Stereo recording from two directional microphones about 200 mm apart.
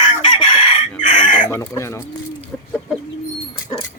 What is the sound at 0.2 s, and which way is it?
Chicken, 25° left (ahead or behind).